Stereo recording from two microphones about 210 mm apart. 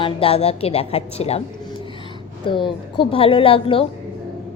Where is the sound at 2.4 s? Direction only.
25° left (ahead or behind).